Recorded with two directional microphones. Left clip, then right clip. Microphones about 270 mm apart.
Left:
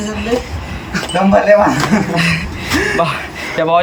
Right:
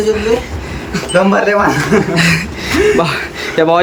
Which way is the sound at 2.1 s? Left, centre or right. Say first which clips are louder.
Right 3 dB; centre.